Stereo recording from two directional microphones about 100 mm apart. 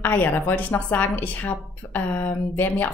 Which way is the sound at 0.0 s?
20° left (ahead or behind).